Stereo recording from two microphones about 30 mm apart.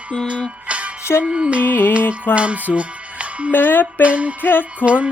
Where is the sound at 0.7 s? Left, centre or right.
Right.